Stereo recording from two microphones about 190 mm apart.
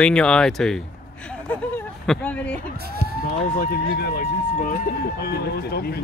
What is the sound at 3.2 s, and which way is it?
Speech, 50° left (ahead or behind).